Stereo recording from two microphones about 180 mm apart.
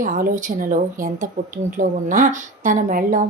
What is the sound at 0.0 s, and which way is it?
Speech, 45° right (ahead or behind).